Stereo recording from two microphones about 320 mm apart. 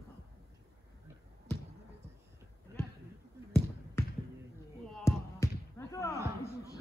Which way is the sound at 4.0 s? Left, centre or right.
Centre.